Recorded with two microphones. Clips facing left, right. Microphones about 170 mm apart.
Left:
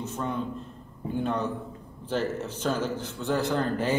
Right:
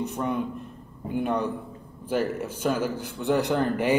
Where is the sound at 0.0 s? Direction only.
15° right (ahead or behind).